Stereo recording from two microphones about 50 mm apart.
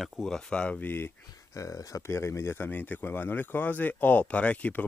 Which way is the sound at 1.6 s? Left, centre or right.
Left.